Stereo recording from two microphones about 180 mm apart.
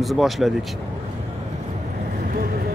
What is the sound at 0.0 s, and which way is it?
Speech, centre (ahead or behind).